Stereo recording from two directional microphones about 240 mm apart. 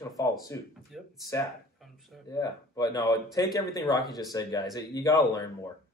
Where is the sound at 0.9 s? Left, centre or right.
Centre.